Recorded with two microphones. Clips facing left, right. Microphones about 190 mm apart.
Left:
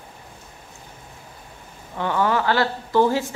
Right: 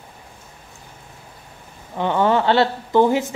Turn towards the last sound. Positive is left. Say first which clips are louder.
# right 3 dB
turn(degrees=-20)  # may be behind; listen again after turning